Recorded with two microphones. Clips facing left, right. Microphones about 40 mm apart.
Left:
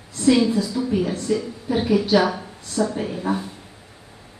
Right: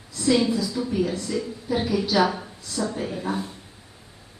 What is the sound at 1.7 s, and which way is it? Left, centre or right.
A woman's voice, left.